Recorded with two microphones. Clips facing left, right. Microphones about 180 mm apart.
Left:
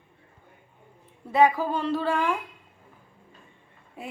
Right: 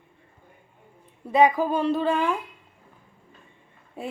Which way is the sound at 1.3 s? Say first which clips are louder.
Right 2 dB; 20° right (ahead or behind).